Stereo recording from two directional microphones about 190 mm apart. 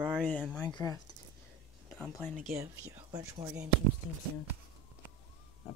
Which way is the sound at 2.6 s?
15° right (ahead or behind).